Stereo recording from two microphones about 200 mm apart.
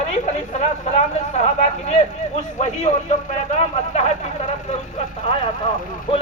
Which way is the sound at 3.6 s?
35° left (ahead or behind).